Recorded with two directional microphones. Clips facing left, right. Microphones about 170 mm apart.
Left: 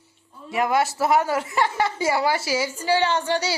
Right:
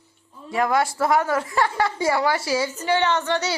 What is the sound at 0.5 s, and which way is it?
A woman's voice, 25° left (ahead or behind).